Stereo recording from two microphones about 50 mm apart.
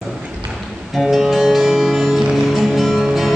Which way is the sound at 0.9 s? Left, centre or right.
Centre.